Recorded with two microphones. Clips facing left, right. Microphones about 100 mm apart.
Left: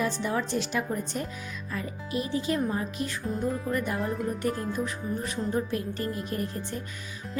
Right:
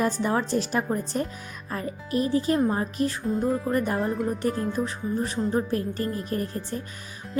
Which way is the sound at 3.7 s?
40° right (ahead or behind).